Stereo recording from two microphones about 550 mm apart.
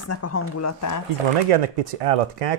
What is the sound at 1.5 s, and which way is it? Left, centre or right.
Speech, right.